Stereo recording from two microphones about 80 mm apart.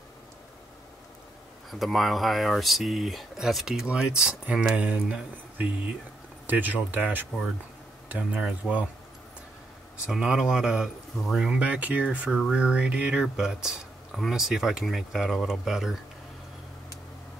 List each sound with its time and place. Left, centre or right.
1.7 s speech: centre
10.0 s speech: centre
11.6 s speech: centre